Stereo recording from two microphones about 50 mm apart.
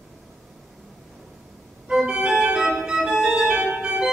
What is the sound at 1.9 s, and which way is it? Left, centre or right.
Organ, centre.